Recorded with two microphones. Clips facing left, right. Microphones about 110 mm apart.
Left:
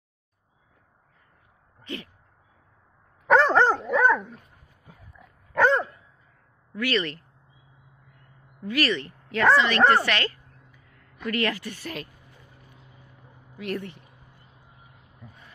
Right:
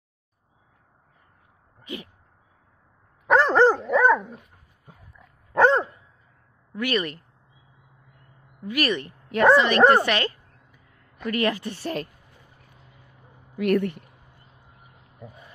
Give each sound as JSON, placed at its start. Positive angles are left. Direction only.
{"t": 1.8, "sound": "a sound", "side_deg": -15}
{"t": 3.3, "sound": "dog", "side_deg": 0}
{"t": 5.5, "sound": "dog", "side_deg": -25}
{"t": 6.7, "sound": "speech", "side_deg": -20}
{"t": 8.6, "sound": "speech", "side_deg": -15}
{"t": 9.3, "sound": "a sound", "side_deg": -20}
{"t": 11.2, "sound": "speech", "side_deg": -20}
{"t": 11.7, "sound": "speech", "side_deg": -35}
{"t": 13.6, "sound": "speech", "side_deg": -65}